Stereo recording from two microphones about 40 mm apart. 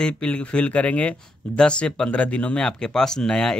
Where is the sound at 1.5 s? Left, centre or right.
Left.